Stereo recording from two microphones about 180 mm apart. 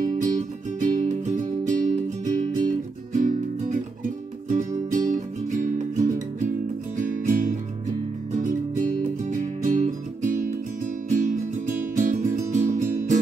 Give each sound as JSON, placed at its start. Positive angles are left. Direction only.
{"t": 0.0, "sound": "music", "side_deg": -45}